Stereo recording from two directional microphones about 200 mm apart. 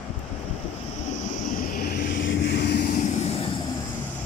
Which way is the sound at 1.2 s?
40° left (ahead or behind).